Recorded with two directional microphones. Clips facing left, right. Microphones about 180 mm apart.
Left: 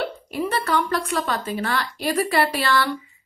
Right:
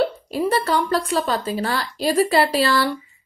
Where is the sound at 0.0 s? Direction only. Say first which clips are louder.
Right 5 dB; 30° right (ahead or behind).